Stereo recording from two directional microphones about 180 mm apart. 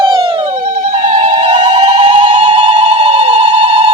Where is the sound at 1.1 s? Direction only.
30° right (ahead or behind).